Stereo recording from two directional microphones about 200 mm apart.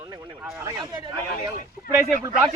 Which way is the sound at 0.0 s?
15° right (ahead or behind).